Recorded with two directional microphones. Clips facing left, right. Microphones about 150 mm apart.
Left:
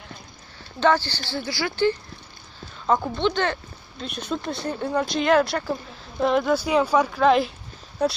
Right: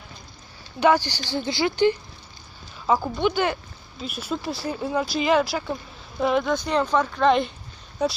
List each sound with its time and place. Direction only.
0.7 s speech: 15° right (ahead or behind)
2.9 s speech: 5° right (ahead or behind)